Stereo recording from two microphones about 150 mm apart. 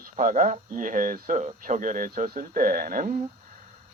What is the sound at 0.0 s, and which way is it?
Speech, 60° right (ahead or behind).